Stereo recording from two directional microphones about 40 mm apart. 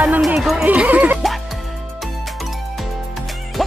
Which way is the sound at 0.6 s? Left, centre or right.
Right.